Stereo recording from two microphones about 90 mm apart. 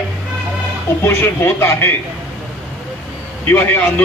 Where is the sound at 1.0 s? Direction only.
25° left (ahead or behind).